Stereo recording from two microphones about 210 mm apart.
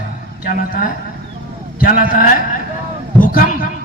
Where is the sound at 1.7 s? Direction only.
40° left (ahead or behind).